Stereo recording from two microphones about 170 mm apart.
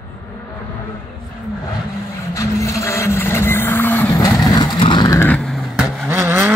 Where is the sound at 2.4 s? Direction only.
20° left (ahead or behind).